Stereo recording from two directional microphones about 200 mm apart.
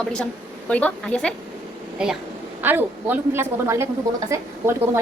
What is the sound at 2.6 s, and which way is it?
A woman's voice, 10° right (ahead or behind).